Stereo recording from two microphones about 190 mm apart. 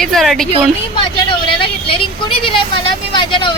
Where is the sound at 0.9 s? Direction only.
25° left (ahead or behind).